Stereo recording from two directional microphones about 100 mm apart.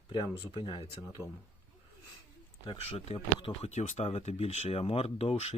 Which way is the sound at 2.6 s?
75° left (ahead or behind).